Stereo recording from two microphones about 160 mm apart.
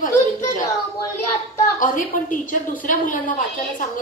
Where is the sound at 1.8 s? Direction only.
55° left (ahead or behind).